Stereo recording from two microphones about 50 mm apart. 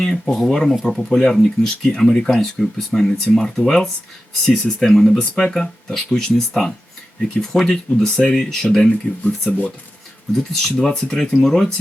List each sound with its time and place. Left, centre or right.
0.0 s speech: centre
0.5 s speech: centre
9.5 s speech: left
10.3 s speech: centre
10.8 s speech: centre